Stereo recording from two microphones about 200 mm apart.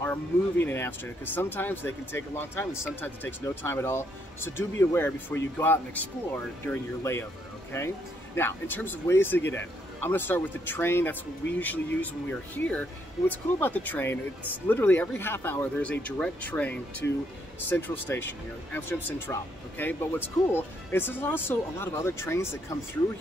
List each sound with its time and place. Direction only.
0.0 s speech: 10° left (ahead or behind)
8.4 s speech: 10° left (ahead or behind)